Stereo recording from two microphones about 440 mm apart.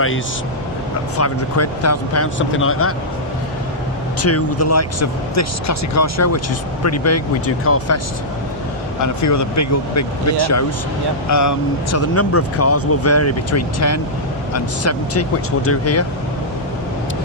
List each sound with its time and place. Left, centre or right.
1.1 s speech: left
4.2 s speech: left
9.0 s speech: left